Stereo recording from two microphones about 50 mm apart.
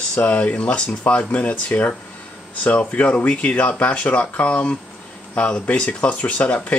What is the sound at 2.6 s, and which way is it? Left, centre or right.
Speech, left.